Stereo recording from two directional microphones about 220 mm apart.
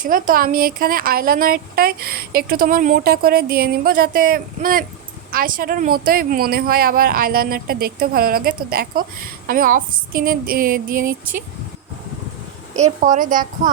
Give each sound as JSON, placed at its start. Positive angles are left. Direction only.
{"t": 0.0, "sound": "speech", "side_deg": -40}
{"t": 12.7, "sound": "speech", "side_deg": -35}